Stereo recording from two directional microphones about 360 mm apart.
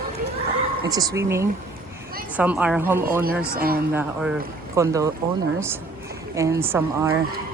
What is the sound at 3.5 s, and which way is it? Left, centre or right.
Speech, right.